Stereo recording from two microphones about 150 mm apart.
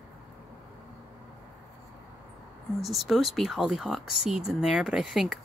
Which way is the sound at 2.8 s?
Centre (ahead or behind).